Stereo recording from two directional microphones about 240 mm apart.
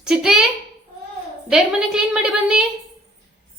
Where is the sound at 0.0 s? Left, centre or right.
Centre.